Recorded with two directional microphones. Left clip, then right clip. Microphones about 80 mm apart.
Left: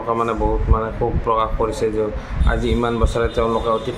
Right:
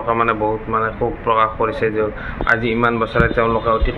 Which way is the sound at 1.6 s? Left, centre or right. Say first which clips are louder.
Right 2 dB; left.